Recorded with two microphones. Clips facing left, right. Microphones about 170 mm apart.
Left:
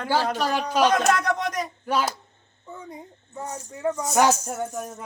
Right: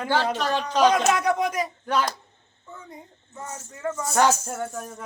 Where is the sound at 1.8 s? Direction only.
10° left (ahead or behind).